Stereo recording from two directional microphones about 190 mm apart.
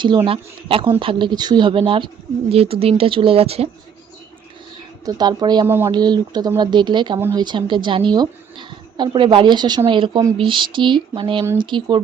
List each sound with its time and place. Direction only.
0.3 s a woman's voice: 30° right (ahead or behind)
5.0 s a woman's voice: 20° right (ahead or behind)
7.2 s speech: 10° right (ahead or behind)
7.4 s a woman's voice: 25° right (ahead or behind)